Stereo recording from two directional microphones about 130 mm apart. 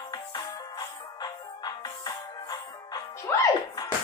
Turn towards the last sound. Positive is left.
turn(degrees=30)  # may be behind; listen again after turning